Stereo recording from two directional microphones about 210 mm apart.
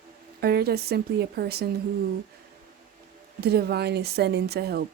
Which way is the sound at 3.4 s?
50° right (ahead or behind).